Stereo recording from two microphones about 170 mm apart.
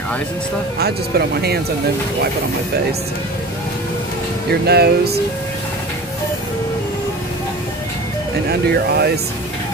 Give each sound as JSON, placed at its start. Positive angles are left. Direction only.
{"t": 0.7, "sound": "speech", "side_deg": -65}
{"t": 4.5, "sound": "speech", "side_deg": -70}
{"t": 8.5, "sound": "speech", "side_deg": -70}